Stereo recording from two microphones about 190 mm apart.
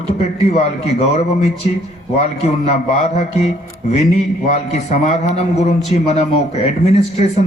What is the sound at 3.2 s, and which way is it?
Speech, 35° left (ahead or behind).